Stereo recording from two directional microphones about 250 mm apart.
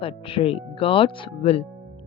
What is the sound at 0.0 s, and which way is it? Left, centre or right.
Speech, left.